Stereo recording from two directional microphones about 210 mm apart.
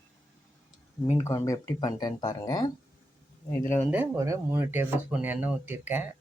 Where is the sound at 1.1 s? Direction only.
15° left (ahead or behind).